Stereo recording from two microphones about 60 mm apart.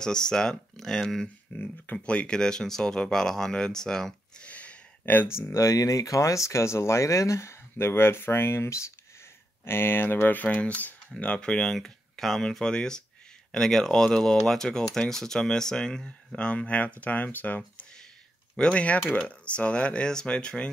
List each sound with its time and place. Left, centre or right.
0.0 s speech: centre
1.5 s speech: left; by 4.5 s centre
4.5 s a sound: left
5.3 s speech: left
7.7 s speech: left
9.7 s speech: left; by 11.7 s centre
11.7 s speech: centre